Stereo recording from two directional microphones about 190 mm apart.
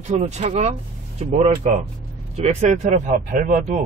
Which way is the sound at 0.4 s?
35° right (ahead or behind).